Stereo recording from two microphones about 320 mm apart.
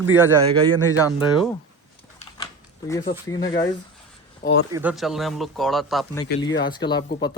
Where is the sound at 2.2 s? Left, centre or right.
Centre.